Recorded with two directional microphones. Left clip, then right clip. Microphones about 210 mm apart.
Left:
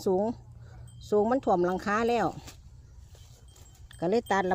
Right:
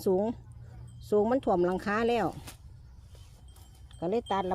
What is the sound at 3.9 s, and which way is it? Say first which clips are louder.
Speech: left 3 dB; 25° left (ahead or behind).